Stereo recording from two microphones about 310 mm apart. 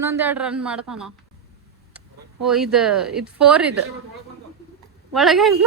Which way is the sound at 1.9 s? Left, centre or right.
Centre.